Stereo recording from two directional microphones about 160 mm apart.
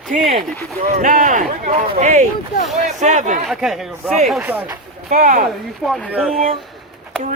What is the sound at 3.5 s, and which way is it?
Speech, centre (ahead or behind).